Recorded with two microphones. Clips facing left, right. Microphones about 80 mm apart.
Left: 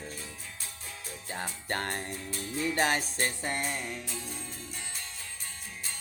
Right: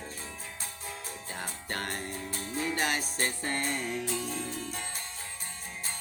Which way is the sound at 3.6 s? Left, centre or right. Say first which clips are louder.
Right 3 dB; right.